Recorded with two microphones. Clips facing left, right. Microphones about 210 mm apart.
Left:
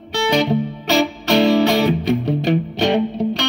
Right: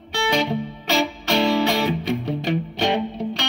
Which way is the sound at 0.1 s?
40° left (ahead or behind).